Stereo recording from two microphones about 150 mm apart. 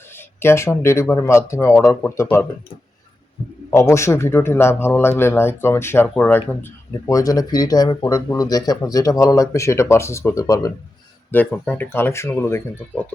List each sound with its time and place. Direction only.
0.3 s speech: 15° left (ahead or behind)
3.7 s speech: 20° left (ahead or behind)
7.1 s speech: 25° left (ahead or behind)
11.3 s speech: 10° left (ahead or behind)